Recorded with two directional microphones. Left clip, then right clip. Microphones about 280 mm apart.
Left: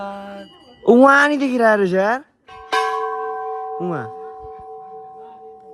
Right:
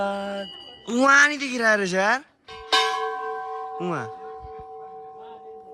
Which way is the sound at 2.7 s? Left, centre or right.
Left.